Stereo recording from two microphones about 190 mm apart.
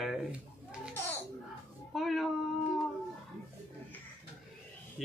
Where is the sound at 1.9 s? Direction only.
Centre (ahead or behind).